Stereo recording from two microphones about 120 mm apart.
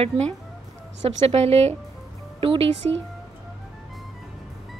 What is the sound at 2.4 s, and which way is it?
Speech, 50° right (ahead or behind).